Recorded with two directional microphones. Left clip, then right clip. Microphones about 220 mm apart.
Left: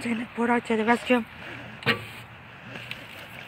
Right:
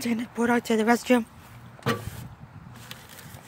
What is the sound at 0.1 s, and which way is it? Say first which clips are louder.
Speech: even; 25° right (ahead or behind).